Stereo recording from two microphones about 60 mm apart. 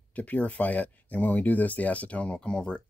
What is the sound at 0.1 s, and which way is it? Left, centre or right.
Speech, left.